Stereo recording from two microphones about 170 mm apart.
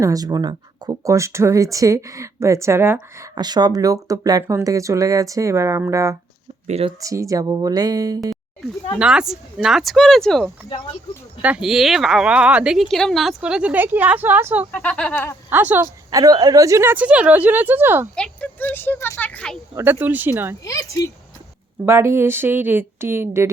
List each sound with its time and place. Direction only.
0.0 s speech: 20° right (ahead or behind)
3.3 s speech: 25° right (ahead or behind)
6.7 s speech: 40° right (ahead or behind)
7.0 s speech: 20° right (ahead or behind)
9.0 s speech: 5° right (ahead or behind)
11.4 s speech: 5° right (ahead or behind)
14.7 s speech: 5° left (ahead or behind)
15.4 s speech: 10° right (ahead or behind)
18.1 s speech: 5° left (ahead or behind)
19.7 s speech: 10° right (ahead or behind)
20.7 s speech: 20° left (ahead or behind)
21.8 s speech: 15° right (ahead or behind)